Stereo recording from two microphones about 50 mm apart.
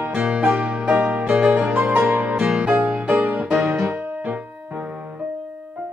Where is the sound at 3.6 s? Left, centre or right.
Right.